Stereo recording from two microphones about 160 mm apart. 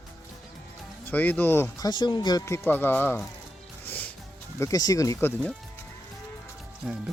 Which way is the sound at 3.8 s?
10° left (ahead or behind).